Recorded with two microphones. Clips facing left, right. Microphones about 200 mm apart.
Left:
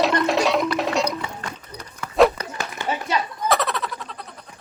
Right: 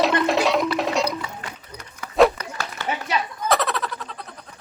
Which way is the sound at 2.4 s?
20° left (ahead or behind).